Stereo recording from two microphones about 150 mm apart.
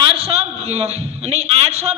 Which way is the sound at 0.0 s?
40° right (ahead or behind).